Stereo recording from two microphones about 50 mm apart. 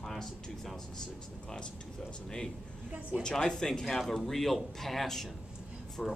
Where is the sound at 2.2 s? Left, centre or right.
Centre.